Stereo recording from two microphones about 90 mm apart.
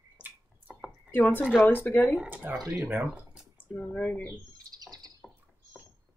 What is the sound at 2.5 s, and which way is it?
Speech, 25° right (ahead or behind).